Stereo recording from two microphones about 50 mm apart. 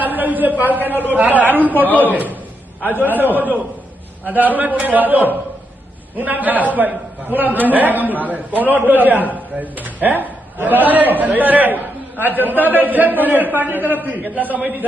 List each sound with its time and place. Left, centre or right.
0.0 s a sound: right
0.6 s a man's voice: right
1.7 s a man's voice: left
2.0 s a man's voice: right